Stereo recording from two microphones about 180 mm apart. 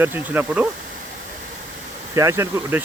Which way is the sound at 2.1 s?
15° right (ahead or behind).